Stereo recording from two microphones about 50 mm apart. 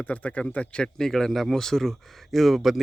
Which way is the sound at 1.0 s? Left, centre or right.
Centre.